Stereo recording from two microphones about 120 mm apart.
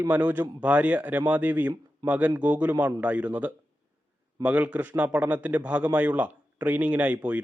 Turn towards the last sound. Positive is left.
turn(degrees=-10)  # may be behind; listen again after turning